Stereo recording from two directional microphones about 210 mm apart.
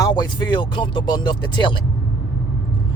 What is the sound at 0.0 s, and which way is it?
Speech, 20° left (ahead or behind).